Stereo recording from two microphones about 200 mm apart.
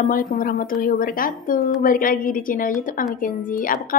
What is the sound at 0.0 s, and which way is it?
A woman's voice, 40° left (ahead or behind).